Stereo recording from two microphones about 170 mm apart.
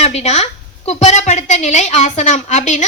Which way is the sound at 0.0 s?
40° left (ahead or behind).